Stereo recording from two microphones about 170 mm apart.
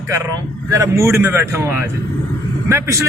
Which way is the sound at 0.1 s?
15° right (ahead or behind).